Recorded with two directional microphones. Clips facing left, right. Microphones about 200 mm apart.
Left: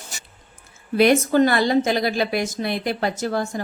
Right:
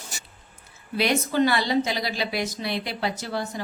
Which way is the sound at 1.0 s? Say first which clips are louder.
Left 7 dB; 50° left (ahead or behind).